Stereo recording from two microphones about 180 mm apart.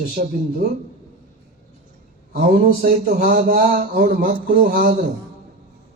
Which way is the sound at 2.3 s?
55° right (ahead or behind).